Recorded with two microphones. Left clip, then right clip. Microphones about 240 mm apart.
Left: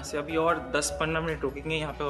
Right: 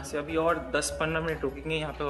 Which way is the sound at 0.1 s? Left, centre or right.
Centre.